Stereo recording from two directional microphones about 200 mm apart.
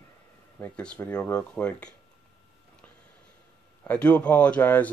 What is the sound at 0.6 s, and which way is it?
Speech, 5° left (ahead or behind).